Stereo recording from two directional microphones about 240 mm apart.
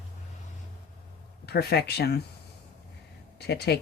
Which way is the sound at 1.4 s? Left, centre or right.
Left.